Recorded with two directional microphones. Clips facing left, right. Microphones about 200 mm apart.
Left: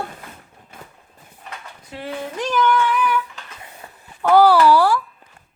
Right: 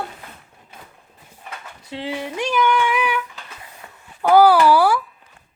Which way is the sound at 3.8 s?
30° left (ahead or behind).